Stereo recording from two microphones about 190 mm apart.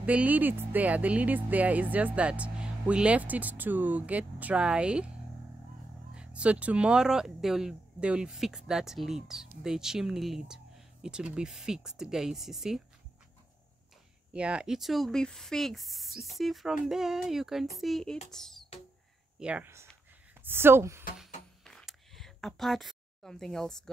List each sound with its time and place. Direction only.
0.0 s speech: 10° right (ahead or behind)
6.1 s speech: 5° right (ahead or behind)
14.3 s speech: 5° right (ahead or behind)
19.4 s speech: 10° right (ahead or behind)
21.6 s a sound: centre (ahead or behind)